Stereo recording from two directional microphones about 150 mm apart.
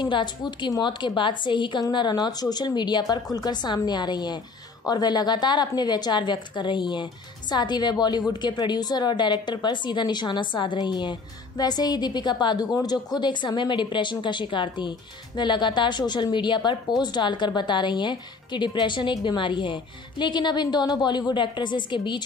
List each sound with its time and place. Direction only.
0.0 s a woman's voice: 30° left (ahead or behind)